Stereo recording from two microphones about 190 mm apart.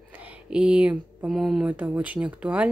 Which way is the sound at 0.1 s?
5° right (ahead or behind).